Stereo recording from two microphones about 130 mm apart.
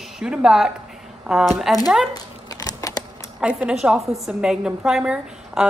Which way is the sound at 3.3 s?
5° right (ahead or behind).